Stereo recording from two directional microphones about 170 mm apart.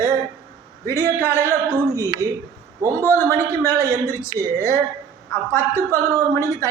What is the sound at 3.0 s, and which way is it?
A man's voice, 15° left (ahead or behind).